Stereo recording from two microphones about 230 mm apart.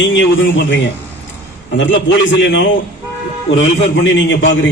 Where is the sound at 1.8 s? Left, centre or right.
Left.